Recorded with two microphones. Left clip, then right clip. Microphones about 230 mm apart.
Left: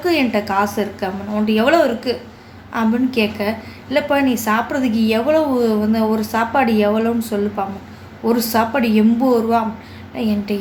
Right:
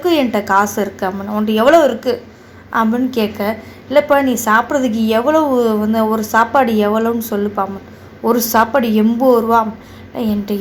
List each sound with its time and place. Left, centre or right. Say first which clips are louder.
0.0 s a woman's voice: right 3 dB; centre